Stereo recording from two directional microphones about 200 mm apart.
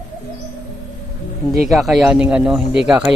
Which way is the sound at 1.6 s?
Centre (ahead or behind).